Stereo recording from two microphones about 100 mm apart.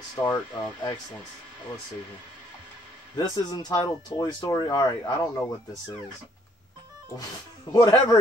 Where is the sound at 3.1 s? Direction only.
45° left (ahead or behind).